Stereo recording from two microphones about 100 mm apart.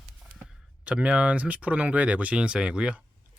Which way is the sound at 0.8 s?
10° right (ahead or behind).